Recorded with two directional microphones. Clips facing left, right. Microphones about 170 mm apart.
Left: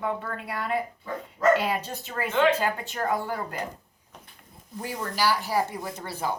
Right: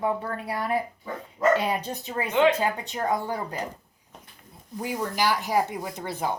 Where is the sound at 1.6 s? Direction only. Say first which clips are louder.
Right 1 dB; 20° right (ahead or behind).